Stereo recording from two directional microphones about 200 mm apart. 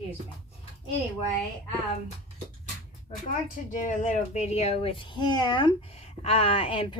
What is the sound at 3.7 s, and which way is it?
Speech, 40° left (ahead or behind).